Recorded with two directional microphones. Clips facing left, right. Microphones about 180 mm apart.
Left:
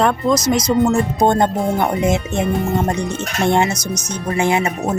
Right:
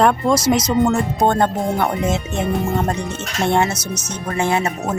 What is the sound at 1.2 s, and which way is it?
Speech, 15° left (ahead or behind).